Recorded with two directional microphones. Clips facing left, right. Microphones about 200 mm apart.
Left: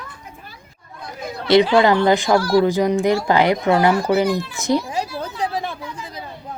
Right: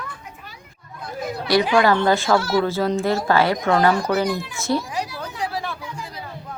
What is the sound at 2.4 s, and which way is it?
Speech, 25° right (ahead or behind).